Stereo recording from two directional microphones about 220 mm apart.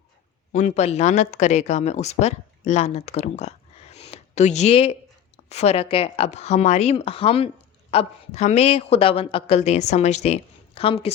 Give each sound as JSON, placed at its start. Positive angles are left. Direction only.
{"t": 0.5, "sound": "speech", "side_deg": 30}